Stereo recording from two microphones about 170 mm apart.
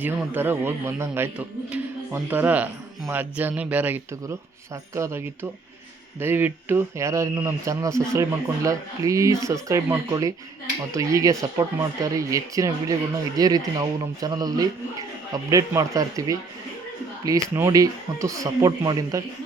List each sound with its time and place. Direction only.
0.0 s speech: 10° right (ahead or behind)